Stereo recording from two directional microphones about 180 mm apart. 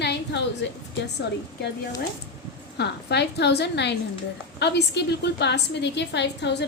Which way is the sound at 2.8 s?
70° left (ahead or behind).